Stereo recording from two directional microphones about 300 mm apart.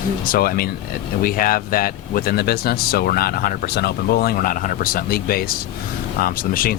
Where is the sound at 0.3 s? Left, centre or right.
Left.